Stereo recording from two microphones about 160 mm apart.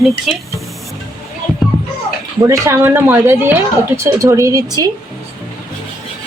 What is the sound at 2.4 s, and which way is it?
Speech, 20° right (ahead or behind).